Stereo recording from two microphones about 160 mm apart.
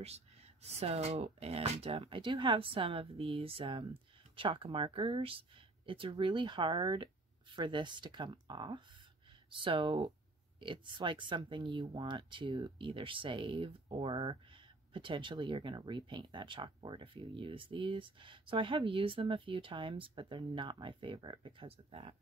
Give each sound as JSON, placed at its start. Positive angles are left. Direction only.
{"t": 0.0, "sound": "speech", "side_deg": -40}